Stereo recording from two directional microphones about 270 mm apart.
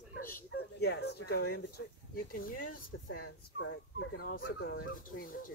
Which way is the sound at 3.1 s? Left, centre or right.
Left.